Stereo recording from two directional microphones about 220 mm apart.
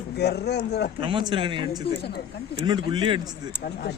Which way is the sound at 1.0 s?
20° right (ahead or behind).